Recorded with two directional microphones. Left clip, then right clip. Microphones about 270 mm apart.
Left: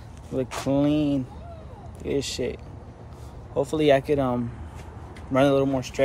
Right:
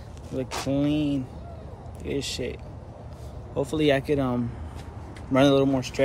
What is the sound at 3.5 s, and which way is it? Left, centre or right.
Speech, centre.